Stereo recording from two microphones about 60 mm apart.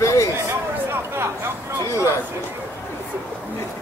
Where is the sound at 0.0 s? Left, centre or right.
Left.